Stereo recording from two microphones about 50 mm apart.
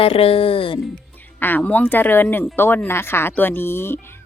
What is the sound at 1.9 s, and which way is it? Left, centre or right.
A woman's voice, left.